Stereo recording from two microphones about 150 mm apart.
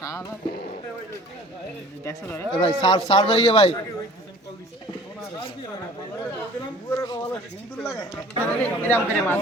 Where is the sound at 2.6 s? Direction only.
40° left (ahead or behind).